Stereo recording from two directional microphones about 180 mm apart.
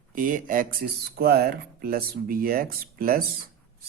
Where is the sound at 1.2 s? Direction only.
60° right (ahead or behind).